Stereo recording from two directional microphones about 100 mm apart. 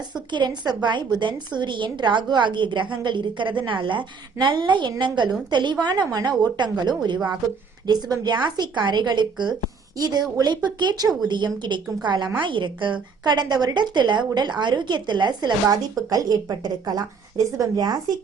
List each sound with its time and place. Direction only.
0.3 s a woman's voice: 50° right (ahead or behind)